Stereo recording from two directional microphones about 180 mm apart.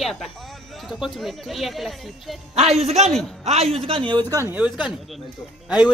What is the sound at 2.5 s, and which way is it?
Speech, 35° right (ahead or behind).